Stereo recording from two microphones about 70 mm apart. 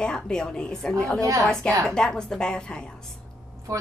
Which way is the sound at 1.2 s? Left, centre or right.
Right.